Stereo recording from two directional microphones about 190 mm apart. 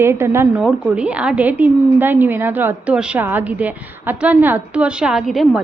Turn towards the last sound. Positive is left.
turn(degrees=0)  # may be behind; listen again after turning